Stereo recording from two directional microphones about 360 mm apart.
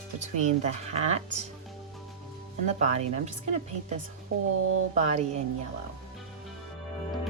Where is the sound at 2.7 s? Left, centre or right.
Centre.